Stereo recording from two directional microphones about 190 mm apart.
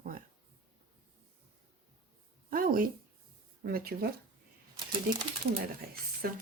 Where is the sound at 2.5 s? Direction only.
50° right (ahead or behind).